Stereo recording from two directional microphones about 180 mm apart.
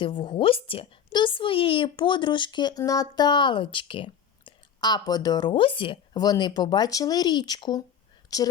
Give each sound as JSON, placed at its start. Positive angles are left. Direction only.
{"t": 0.0, "sound": "a woman's voice", "side_deg": 30}